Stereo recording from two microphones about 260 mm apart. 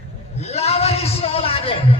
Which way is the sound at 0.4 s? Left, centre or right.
Left.